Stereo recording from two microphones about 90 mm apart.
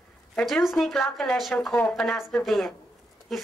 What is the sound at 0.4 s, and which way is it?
A woman's voice, centre (ahead or behind).